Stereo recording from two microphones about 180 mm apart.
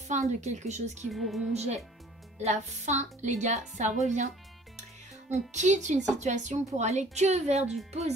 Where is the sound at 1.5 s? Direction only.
40° right (ahead or behind).